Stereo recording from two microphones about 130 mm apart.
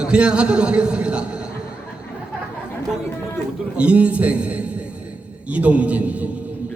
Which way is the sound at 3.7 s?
10° right (ahead or behind).